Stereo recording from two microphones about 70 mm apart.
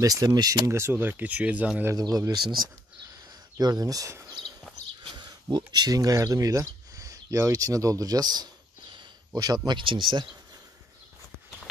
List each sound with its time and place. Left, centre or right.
0.0 s speech: right
0.7 s speech: right
2.0 s speech: right
3.5 s speech: right
5.1 s a sound: right
5.7 s speech: right
9.7 s speech: right